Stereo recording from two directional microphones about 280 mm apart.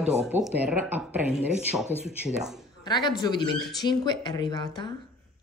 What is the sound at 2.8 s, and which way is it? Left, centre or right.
Speech, centre.